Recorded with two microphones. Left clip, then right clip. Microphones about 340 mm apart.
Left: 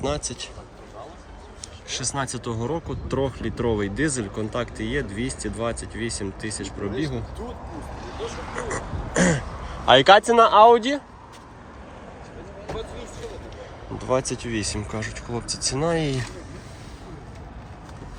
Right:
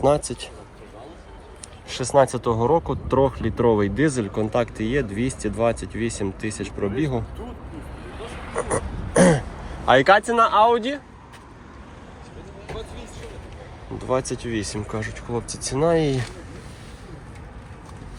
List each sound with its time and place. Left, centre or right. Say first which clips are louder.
0.3 s speech: right 1 dB; centre
1.9 s speech: right 10 dB; centre
8.5 s a sound: right 8 dB; centre
9.8 s speech: left 2 dB; centre
12.7 s music: left 2 dB; left
14.0 s speech: even; centre